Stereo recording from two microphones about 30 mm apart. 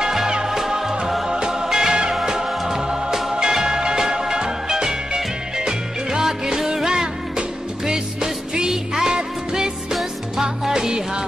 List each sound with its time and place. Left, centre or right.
0.5 s music: centre
3.3 s music: right